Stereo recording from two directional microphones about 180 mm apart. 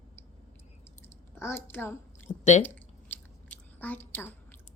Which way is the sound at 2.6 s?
10° left (ahead or behind).